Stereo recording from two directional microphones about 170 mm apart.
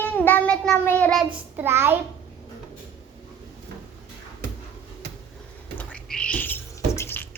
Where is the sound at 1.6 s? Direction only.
15° right (ahead or behind).